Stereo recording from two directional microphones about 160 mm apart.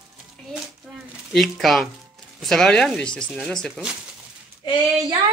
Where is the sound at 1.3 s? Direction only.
Centre (ahead or behind).